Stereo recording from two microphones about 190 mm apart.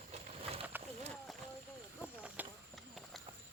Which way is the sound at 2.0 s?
10° right (ahead or behind).